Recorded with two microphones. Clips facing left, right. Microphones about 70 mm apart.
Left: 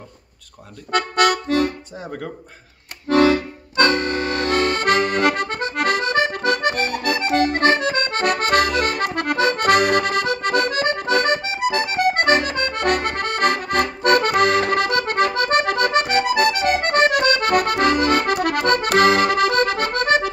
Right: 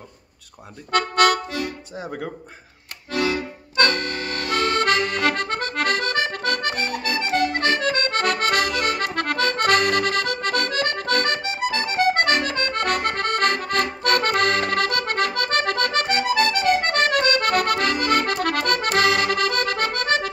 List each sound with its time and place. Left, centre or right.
0.9 s speech: centre
2.0 s speech: centre
3.1 s accordion: left
3.7 s accordion: left
4.7 s accordion: left
6.7 s accordion: left
7.8 s accordion: centre
9.0 s accordion: centre